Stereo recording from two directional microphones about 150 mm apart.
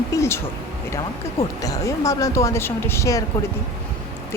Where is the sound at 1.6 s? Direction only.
20° left (ahead or behind).